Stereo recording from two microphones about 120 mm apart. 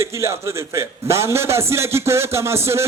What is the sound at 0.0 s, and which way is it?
Speech, 25° right (ahead or behind).